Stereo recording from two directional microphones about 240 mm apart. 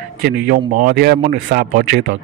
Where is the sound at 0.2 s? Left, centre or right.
Right.